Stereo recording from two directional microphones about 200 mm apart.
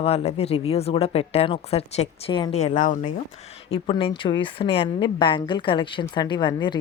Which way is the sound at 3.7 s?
25° left (ahead or behind).